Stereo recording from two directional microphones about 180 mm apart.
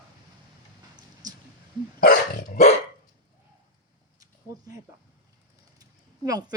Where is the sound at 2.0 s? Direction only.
50° left (ahead or behind).